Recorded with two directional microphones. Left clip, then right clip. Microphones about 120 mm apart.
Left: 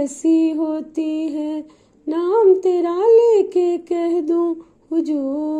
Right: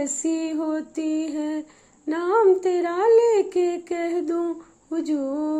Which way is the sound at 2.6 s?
40° left (ahead or behind).